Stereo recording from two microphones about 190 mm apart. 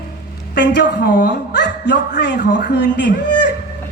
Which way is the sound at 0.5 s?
65° left (ahead or behind).